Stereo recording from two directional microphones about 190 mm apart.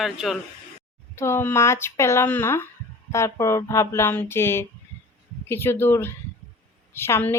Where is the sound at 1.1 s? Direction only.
15° left (ahead or behind).